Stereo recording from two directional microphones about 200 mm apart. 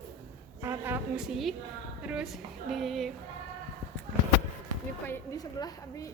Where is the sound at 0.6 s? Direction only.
10° right (ahead or behind).